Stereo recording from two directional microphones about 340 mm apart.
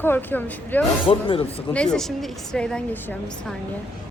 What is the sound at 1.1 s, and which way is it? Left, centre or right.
Speech, centre.